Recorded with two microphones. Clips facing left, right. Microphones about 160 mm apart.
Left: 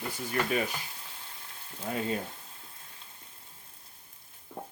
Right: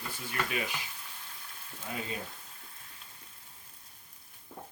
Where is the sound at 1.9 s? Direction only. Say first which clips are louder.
Left 6 dB; 45° left (ahead or behind).